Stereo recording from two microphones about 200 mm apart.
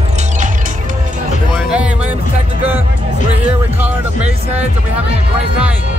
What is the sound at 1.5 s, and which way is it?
Music, 5° right (ahead or behind).